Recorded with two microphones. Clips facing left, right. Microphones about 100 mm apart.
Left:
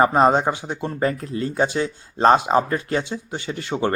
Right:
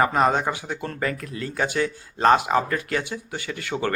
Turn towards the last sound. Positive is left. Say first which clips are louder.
# left 3 dB
turn(degrees=25)  # may be behind; listen again after turning